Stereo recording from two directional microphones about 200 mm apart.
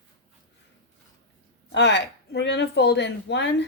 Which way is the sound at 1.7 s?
60° left (ahead or behind).